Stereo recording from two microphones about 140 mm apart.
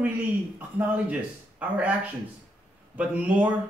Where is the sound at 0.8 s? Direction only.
10° right (ahead or behind).